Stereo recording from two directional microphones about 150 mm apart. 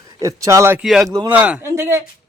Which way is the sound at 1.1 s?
20° right (ahead or behind).